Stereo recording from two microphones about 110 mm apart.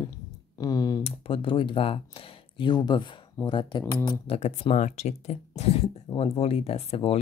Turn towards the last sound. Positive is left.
turn(degrees=65)  # may be behind; listen again after turning